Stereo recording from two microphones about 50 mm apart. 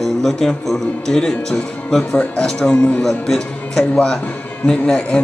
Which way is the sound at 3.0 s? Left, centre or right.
Centre.